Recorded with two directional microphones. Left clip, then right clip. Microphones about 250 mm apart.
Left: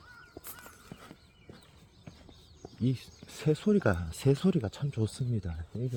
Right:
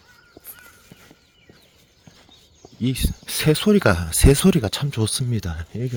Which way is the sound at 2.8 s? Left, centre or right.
Centre.